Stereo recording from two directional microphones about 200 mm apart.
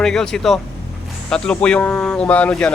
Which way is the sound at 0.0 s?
5° left (ahead or behind).